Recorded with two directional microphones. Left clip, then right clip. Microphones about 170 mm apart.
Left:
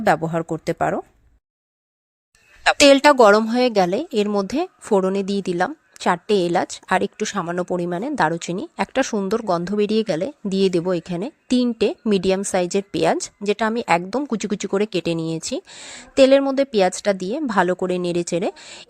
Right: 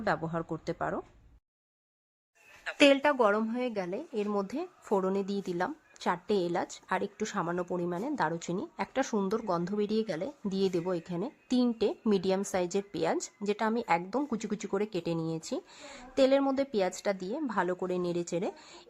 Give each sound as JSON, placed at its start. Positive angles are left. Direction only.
{"t": 0.0, "sound": "speech", "side_deg": 35}
{"t": 2.6, "sound": "a woman's voice", "side_deg": 55}
{"t": 4.3, "sound": "speech", "side_deg": 35}